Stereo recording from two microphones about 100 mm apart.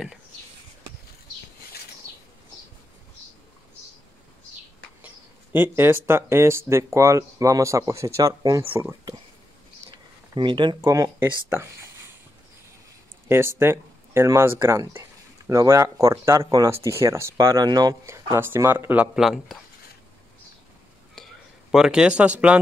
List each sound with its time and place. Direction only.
5.0 s speech: 20° right (ahead or behind); by 8.6 s 35° right (ahead or behind)
9.8 s a sound: 55° right (ahead or behind)
10.8 s speech: 35° right (ahead or behind)
11.2 s speech: 20° right (ahead or behind)
13.3 s speech: 25° right (ahead or behind); by 16.7 s 40° right (ahead or behind)
16.7 s speech: 30° right (ahead or behind)
17.6 s speech: 40° right (ahead or behind)
18.0 s speech: 30° right (ahead or behind)
19.1 s speech: 5° right (ahead or behind)
21.7 s speech: 5° right (ahead or behind)